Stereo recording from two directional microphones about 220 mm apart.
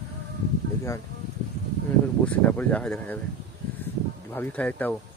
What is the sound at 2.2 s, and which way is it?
Speech, 5° left (ahead or behind).